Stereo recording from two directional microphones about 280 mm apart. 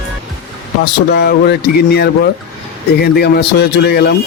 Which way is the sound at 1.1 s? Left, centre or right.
Left.